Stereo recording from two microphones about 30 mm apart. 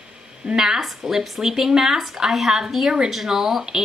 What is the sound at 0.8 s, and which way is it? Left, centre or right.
A woman's voice, centre.